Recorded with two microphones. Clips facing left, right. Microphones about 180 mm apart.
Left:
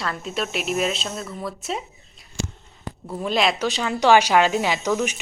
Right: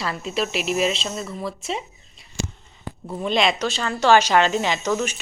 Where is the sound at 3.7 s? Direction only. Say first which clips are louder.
Left 1 dB; 15° left (ahead or behind).